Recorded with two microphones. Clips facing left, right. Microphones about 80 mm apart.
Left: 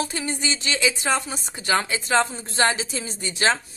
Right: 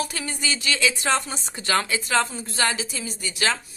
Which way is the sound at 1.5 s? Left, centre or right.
Left.